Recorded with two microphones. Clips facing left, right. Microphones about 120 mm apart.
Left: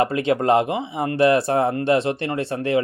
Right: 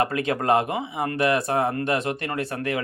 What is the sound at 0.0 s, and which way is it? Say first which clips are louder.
A man's voice: left 4 dB; 25° left (ahead or behind).